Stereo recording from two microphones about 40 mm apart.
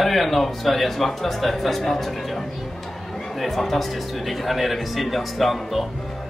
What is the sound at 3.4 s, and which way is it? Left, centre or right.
A man's voice, centre.